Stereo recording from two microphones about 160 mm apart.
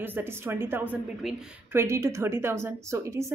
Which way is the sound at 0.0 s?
15° right (ahead or behind).